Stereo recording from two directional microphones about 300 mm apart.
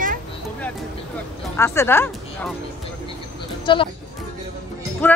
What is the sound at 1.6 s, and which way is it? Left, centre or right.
Speech, centre.